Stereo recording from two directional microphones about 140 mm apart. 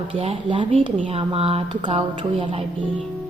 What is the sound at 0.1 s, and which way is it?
Speech, 40° right (ahead or behind).